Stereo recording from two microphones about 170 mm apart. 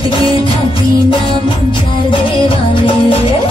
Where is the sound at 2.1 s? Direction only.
30° left (ahead or behind).